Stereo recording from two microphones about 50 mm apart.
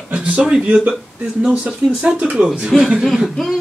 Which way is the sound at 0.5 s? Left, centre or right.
Right.